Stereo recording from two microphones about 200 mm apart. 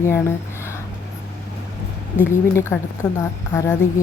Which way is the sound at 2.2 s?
15° left (ahead or behind).